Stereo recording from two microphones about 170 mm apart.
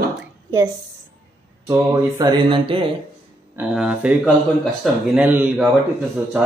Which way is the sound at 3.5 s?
5° right (ahead or behind).